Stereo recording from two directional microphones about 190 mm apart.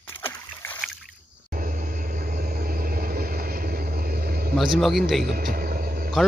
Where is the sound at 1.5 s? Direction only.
45° right (ahead or behind).